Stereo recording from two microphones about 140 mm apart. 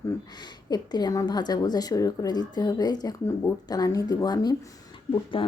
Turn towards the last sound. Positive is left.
turn(degrees=40)  # may be behind; listen again after turning